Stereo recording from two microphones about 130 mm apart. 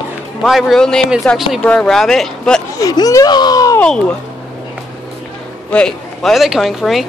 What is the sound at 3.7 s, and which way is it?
Speech, 5° left (ahead or behind).